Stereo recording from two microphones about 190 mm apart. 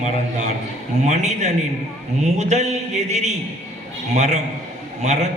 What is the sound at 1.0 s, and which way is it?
A man's voice, 40° right (ahead or behind).